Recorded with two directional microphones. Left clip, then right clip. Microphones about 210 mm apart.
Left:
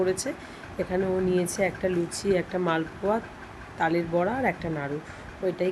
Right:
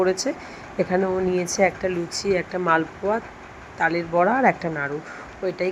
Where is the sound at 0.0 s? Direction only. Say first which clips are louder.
Right 5 dB; 5° right (ahead or behind).